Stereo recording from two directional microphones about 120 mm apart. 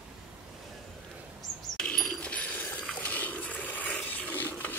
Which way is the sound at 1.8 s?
5° left (ahead or behind).